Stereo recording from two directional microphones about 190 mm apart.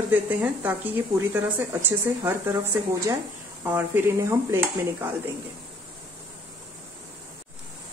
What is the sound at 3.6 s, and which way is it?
Speech, 10° right (ahead or behind).